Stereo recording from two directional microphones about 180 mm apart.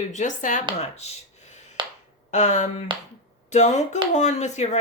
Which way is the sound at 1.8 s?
25° right (ahead or behind).